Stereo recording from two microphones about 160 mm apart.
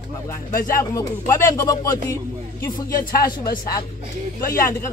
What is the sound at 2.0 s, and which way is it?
Speech, 15° left (ahead or behind).